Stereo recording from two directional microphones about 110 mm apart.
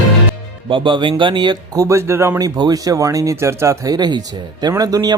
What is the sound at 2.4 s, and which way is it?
Speech, 35° right (ahead or behind).